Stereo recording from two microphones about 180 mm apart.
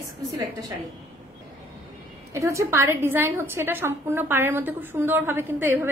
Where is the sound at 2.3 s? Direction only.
15° right (ahead or behind).